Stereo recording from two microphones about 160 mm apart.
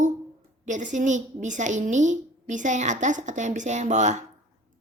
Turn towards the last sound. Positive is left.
turn(degrees=-50)  # may be behind; listen again after turning